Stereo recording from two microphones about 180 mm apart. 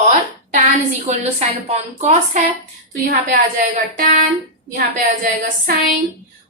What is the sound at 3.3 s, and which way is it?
Speech, 50° right (ahead or behind).